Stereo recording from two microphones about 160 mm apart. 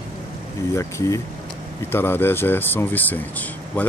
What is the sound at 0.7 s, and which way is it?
Speech, 20° left (ahead or behind).